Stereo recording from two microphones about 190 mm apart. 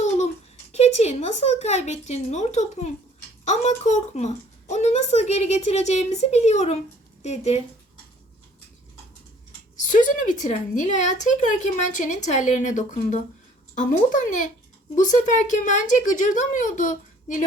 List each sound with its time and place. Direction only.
0.7 s speech: 35° left (ahead or behind)
9.8 s speech: 40° left (ahead or behind)
14.9 s speech: 40° left (ahead or behind)